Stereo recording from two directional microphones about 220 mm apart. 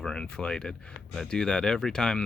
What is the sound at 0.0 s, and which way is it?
Speech, 5° left (ahead or behind).